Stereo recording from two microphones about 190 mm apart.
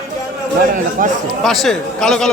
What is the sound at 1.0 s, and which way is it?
Speech, 45° right (ahead or behind).